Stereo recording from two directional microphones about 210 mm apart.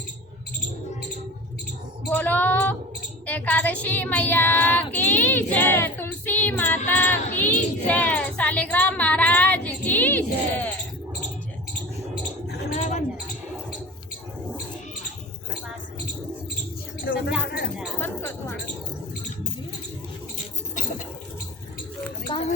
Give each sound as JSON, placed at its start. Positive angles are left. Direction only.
{"t": 2.0, "sound": "female singing", "side_deg": 10}
{"t": 3.2, "sound": "child singing", "side_deg": 5}
{"t": 12.7, "sound": "a sound", "side_deg": 35}
{"t": 18.0, "sound": "speech", "side_deg": 10}
{"t": 22.3, "sound": "speech", "side_deg": 25}